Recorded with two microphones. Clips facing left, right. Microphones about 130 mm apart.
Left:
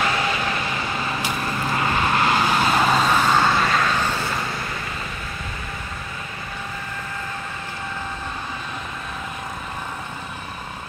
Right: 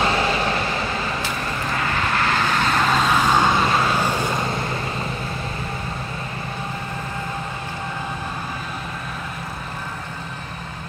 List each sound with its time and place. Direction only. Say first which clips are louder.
0.0 s vehicle: right 3 dB; 30° right (ahead or behind)
1.8 s vehicle: left 2 dB; 20° left (ahead or behind); by 3.3 s 5° left (ahead or behind)
3.3 s vehicle: right 1 dB; 15° right (ahead or behind)